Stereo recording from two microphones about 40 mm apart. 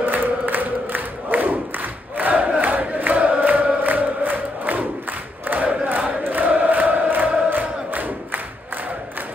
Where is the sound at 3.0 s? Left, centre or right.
Right.